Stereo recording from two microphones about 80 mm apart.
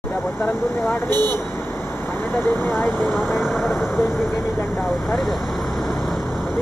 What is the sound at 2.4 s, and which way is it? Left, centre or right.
Speech, left.